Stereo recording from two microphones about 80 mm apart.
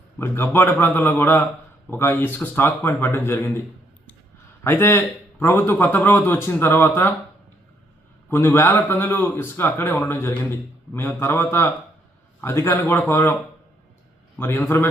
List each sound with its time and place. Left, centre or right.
0.2 s speech: left
4.6 s speech: left
8.3 s speech: left
14.3 s speech: left